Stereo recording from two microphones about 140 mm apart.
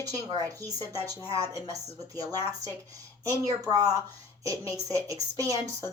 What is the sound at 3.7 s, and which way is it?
Speech, 25° right (ahead or behind).